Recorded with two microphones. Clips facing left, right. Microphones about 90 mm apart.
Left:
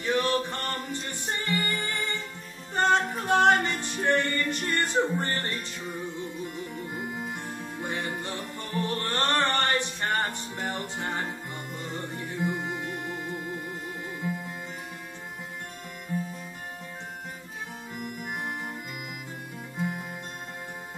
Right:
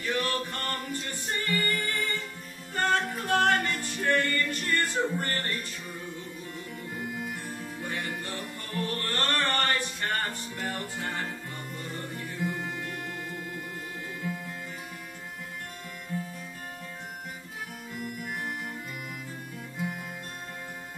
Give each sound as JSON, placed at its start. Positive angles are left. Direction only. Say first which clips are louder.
{"t": 0.0, "sound": "music", "louder": "left 4 dB", "side_deg": 20}
{"t": 17.9, "sound": "music", "louder": "even", "side_deg": 20}
{"t": 19.8, "sound": "music", "louder": "left 3 dB", "side_deg": 20}